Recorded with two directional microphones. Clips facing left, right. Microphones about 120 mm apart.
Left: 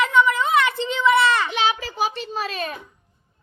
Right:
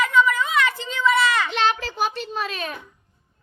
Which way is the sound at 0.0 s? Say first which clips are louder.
Left 1 dB; 25° left (ahead or behind).